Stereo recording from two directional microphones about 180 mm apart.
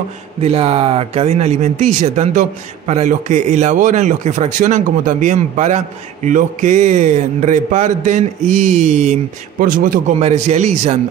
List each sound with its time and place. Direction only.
0.4 s speech: 35° right (ahead or behind)